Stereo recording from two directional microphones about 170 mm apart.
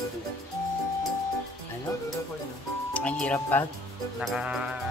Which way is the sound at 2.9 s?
10° left (ahead or behind).